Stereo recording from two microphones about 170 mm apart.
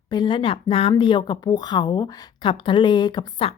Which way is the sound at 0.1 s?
25° left (ahead or behind).